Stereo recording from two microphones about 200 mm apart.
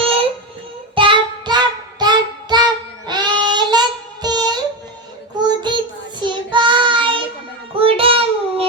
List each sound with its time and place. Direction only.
0.9 s child singing: 25° right (ahead or behind)